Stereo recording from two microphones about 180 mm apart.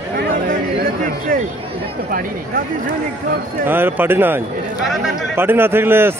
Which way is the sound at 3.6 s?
10° right (ahead or behind).